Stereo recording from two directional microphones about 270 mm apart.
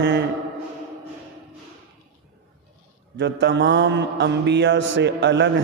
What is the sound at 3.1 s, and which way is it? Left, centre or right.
Speech, right.